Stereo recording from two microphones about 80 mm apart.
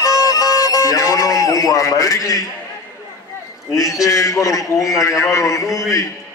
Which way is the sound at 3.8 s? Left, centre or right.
Left.